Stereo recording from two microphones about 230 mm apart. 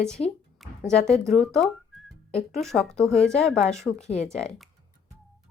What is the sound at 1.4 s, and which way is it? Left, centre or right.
Speech, centre.